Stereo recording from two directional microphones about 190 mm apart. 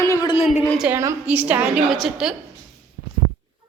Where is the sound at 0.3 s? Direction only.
35° left (ahead or behind).